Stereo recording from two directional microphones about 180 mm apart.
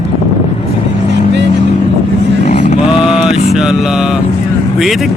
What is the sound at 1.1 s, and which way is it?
Vehicle, 75° right (ahead or behind).